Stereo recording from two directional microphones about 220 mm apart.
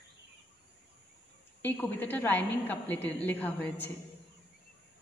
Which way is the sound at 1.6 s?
10° left (ahead or behind).